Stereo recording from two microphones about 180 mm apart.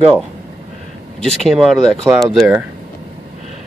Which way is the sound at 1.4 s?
Centre (ahead or behind).